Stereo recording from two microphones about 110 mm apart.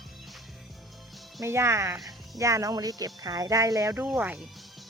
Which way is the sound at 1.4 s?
25° right (ahead or behind).